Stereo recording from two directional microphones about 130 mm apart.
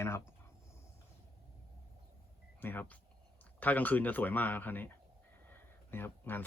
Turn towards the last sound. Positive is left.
turn(degrees=15)  # may be behind; listen again after turning